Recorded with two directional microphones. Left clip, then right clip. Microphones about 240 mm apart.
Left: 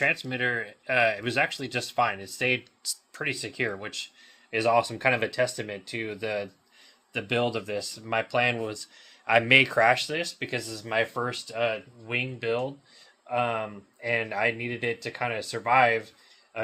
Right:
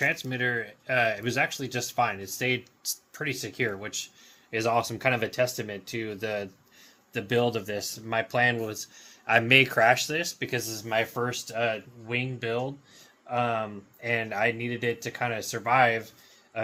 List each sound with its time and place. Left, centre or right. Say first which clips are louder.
0.0 s speech: left 1 dB; left